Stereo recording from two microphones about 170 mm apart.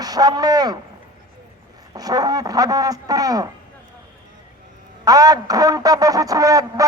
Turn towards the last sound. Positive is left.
turn(degrees=-20)  # may be behind; listen again after turning